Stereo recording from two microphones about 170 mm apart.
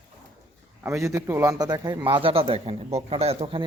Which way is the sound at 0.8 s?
15° right (ahead or behind).